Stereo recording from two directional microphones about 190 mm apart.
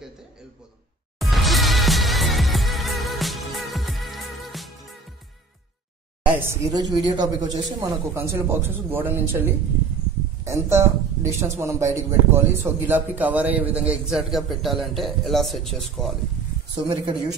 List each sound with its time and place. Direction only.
1.2 s music: centre (ahead or behind)
6.2 s a woman's voice: 10° right (ahead or behind)
16.7 s speech: 25° right (ahead or behind)